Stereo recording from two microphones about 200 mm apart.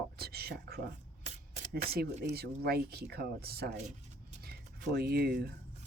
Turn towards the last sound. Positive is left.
turn(degrees=-55)  # may be behind; listen again after turning